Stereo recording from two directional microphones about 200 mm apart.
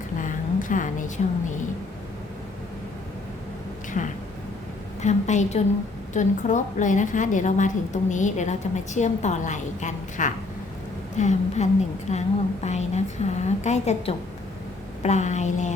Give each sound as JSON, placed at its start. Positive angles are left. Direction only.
{"t": 0.2, "sound": "a woman's voice", "side_deg": 40}
{"t": 4.0, "sound": "a woman's voice", "side_deg": 40}